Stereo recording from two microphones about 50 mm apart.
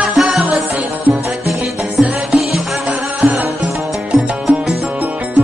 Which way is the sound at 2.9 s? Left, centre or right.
Right.